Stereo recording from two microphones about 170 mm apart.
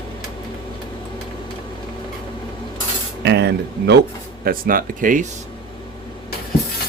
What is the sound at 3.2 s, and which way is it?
Speech, 85° right.